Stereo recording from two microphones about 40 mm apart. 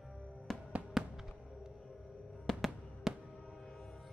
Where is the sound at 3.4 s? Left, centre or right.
Centre.